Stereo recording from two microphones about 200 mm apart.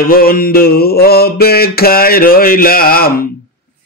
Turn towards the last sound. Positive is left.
turn(degrees=50)  # may be behind; listen again after turning